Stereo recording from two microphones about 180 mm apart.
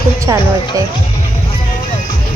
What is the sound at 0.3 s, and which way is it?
Speech, 15° right (ahead or behind).